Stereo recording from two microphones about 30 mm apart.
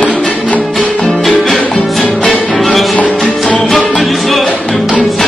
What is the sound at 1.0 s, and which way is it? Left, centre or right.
Music, centre.